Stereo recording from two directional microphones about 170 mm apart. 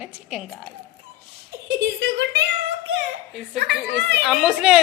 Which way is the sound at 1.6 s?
85° right.